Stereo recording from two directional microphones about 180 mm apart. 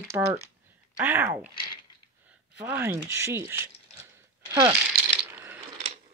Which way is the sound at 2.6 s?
10° right (ahead or behind).